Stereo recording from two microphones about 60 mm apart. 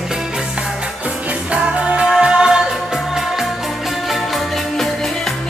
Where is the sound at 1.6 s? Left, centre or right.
Centre.